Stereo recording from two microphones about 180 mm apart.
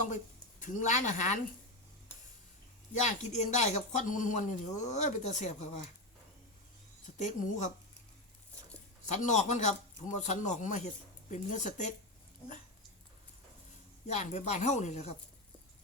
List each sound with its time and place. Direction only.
0.6 s speech: 40° left (ahead or behind)
3.0 s speech: 40° left (ahead or behind)
7.2 s speech: 45° left (ahead or behind)
9.0 s speech: 40° left (ahead or behind)
14.1 s speech: 40° left (ahead or behind)